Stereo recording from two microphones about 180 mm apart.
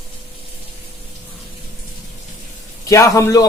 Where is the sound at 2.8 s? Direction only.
15° left (ahead or behind).